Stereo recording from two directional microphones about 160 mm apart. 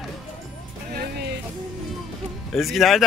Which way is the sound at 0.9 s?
75° right (ahead or behind).